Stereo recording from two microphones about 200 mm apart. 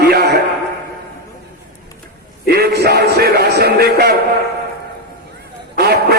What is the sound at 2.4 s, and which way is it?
A man's voice, 50° right (ahead or behind).